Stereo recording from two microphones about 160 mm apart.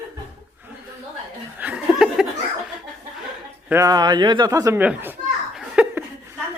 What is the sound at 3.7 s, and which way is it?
A man's voice, 20° right (ahead or behind).